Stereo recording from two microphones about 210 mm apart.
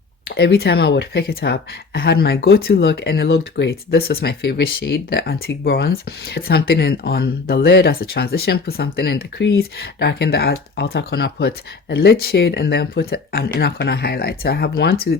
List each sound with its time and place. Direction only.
0.3 s speech: 50° left (ahead or behind)